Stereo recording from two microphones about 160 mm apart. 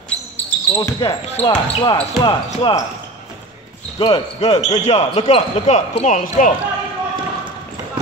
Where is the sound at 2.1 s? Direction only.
25° left (ahead or behind).